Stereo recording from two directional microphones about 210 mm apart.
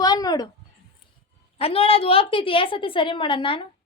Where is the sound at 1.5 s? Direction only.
25° left (ahead or behind).